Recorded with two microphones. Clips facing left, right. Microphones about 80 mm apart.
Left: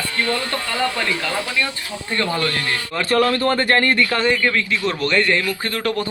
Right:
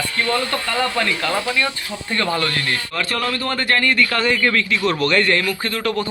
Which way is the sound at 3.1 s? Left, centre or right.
Left.